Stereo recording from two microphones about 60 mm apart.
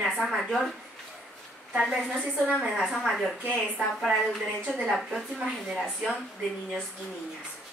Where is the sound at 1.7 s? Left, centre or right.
Centre.